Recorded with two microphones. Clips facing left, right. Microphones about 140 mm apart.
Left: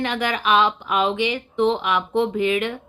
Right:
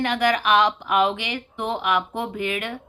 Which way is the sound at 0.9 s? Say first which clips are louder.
Left 1 dB; 65° right (ahead or behind).